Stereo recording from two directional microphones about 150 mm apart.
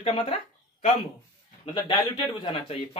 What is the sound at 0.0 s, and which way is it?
Speech, 40° left (ahead or behind).